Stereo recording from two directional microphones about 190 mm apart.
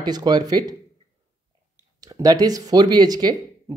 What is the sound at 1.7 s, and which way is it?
Speech, 20° right (ahead or behind).